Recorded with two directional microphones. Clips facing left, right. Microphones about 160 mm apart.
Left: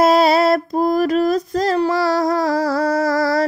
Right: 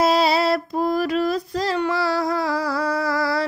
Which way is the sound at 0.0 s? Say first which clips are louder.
Left 5 dB; 50° left (ahead or behind).